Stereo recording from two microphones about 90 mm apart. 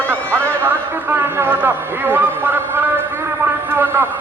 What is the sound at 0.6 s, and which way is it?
A man's voice, 25° right (ahead or behind).